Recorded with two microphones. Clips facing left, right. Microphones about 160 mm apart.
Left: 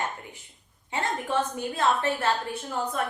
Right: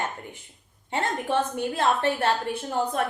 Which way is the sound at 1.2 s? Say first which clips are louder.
Right 2 dB; 60° right (ahead or behind).